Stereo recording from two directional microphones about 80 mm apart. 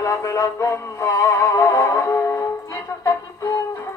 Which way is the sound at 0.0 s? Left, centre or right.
Left.